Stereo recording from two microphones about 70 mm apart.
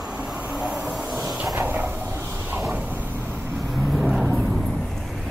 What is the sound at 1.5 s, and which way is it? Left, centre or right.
Vehicle, right.